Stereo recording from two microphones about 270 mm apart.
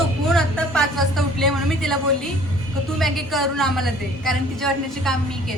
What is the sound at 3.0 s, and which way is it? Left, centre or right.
Speech, centre.